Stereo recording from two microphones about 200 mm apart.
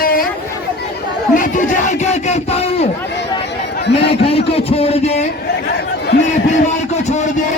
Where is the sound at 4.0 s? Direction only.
30° left (ahead or behind).